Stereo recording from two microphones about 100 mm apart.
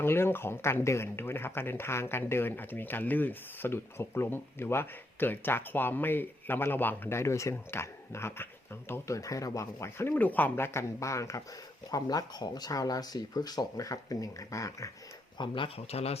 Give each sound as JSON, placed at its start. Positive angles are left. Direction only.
{"t": 0.0, "sound": "speech", "side_deg": 25}
{"t": 15.4, "sound": "speech", "side_deg": 60}